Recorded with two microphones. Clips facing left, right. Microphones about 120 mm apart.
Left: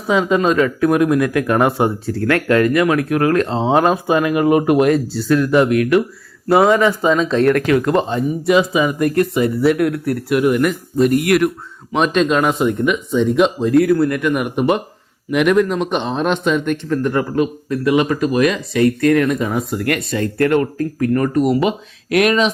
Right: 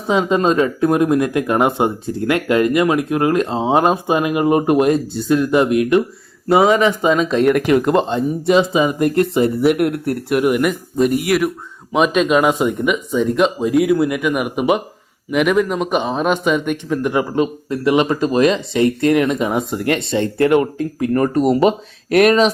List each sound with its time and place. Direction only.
0.1 s speech: 25° right (ahead or behind)
7.9 s a man's voice: centre (ahead or behind)
8.7 s speech: 25° right (ahead or behind)
10.4 s a man's voice: 5° right (ahead or behind)
14.2 s a man's voice: 5° right (ahead or behind); by 22.4 s 35° right (ahead or behind)